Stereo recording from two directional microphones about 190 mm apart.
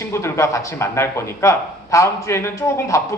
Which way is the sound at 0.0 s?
15° left (ahead or behind).